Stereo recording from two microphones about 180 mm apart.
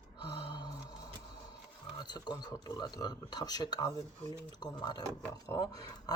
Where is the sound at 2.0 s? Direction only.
25° left (ahead or behind).